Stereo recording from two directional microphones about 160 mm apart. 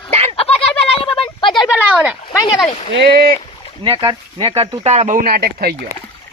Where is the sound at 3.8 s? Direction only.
30° right (ahead or behind); by 5.8 s 75° right (ahead or behind).